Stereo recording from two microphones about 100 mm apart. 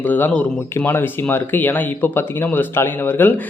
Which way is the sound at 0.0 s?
20° left (ahead or behind).